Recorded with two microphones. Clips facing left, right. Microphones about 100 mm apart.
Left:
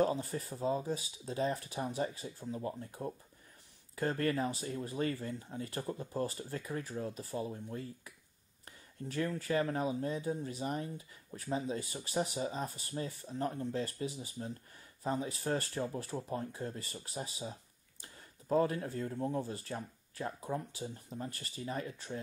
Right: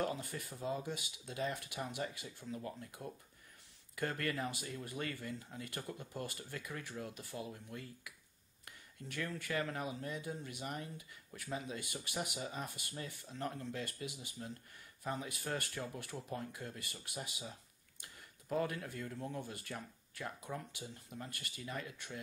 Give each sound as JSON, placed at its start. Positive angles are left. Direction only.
{"t": 0.0, "sound": "speech", "side_deg": 30}